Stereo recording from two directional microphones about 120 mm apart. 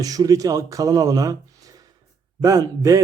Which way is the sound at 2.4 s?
30° right (ahead or behind).